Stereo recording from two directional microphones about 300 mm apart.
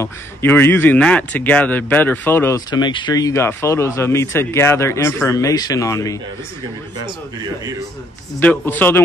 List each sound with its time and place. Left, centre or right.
0.0 s a man's voice: centre
8.4 s a man's voice: centre